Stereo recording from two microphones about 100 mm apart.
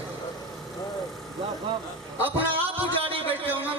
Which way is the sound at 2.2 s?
20° right (ahead or behind).